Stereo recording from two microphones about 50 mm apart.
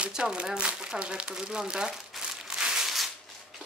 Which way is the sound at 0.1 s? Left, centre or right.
Centre.